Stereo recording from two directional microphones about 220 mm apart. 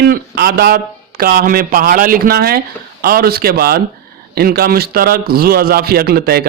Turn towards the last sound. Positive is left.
turn(degrees=-45)  # may be behind; listen again after turning